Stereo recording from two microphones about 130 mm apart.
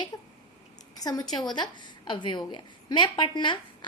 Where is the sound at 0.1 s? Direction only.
30° left (ahead or behind).